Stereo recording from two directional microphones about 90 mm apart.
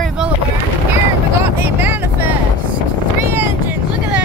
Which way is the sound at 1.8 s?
25° right (ahead or behind).